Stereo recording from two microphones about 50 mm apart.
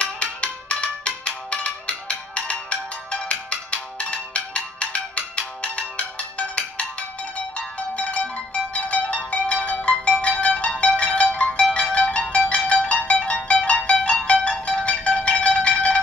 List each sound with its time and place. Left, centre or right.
0.0 s music: left